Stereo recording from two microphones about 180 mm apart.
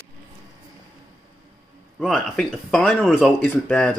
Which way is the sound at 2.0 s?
Centre (ahead or behind).